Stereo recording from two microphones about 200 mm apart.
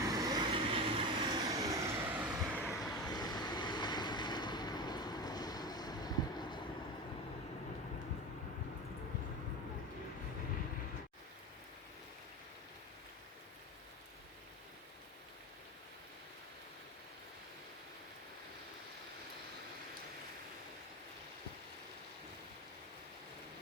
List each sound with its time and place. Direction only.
0.0 s vehicle: 15° right (ahead or behind)
1.5 s vehicle: 15° right (ahead or behind); by 3.0 s centre (ahead or behind)
3.1 s vehicle: 20° left (ahead or behind)